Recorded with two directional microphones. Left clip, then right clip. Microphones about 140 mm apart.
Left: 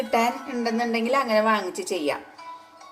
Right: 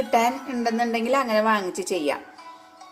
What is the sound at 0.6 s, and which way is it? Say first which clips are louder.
Speech: right 2 dB; 55° right (ahead or behind).